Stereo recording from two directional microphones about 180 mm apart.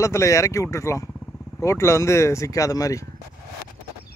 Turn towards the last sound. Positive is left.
turn(degrees=20)  # may be behind; listen again after turning